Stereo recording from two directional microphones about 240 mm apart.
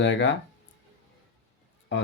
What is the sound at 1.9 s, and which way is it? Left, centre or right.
Speech, left.